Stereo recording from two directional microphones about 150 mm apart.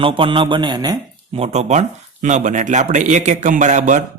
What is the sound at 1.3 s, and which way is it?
Speech, 45° right (ahead or behind).